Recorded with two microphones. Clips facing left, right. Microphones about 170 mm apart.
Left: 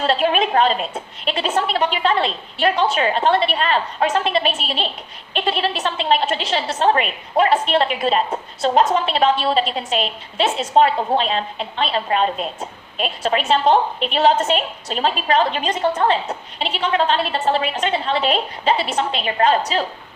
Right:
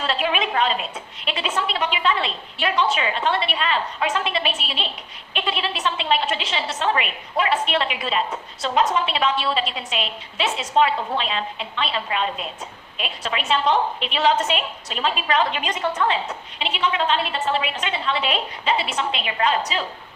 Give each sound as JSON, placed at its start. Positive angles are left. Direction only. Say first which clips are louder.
{"t": 0.0, "sound": "a woman's voice", "louder": "left 6 dB", "side_deg": 45}